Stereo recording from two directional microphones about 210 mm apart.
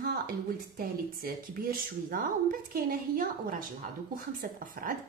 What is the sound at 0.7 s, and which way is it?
Speech, 45° right (ahead or behind).